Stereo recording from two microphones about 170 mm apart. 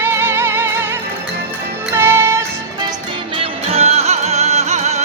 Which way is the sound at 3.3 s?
35° right (ahead or behind).